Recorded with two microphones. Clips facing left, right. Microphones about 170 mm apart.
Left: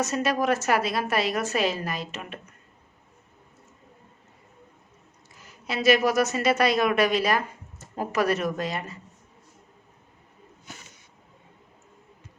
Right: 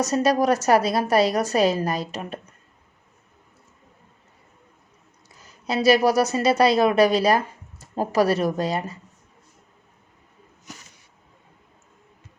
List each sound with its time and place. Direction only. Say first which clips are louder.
0.0 s a woman's voice: right 5 dB; 40° right (ahead or behind)
5.5 s a woman's voice: right 3 dB; 35° right (ahead or behind)